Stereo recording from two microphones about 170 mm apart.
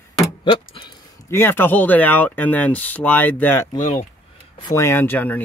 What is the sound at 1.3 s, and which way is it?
Speech, 15° left (ahead or behind).